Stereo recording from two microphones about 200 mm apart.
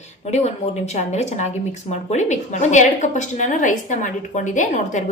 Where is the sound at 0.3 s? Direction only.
35° left (ahead or behind).